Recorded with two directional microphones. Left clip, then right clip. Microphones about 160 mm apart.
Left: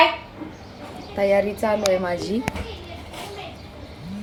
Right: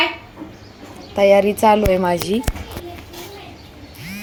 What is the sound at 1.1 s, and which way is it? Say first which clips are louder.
Speech: right 7 dB; 45° right (ahead or behind).